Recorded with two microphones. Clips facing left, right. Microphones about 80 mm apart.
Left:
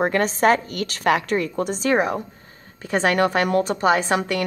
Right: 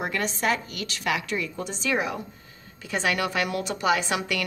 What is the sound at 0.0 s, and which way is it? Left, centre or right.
A woman's voice, left.